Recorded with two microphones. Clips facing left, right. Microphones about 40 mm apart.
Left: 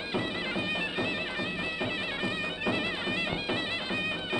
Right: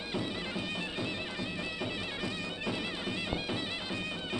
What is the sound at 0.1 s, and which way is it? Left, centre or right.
Music, left.